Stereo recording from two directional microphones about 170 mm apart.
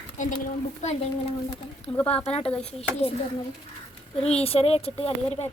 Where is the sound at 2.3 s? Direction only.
35° left (ahead or behind).